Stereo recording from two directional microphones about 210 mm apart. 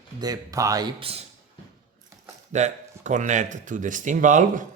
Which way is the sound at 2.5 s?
35° right (ahead or behind).